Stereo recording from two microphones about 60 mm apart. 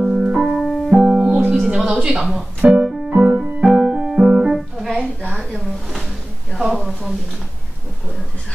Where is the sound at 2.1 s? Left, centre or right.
Centre.